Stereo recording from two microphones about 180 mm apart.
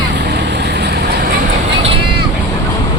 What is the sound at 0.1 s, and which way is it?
Vehicle, 70° right (ahead or behind).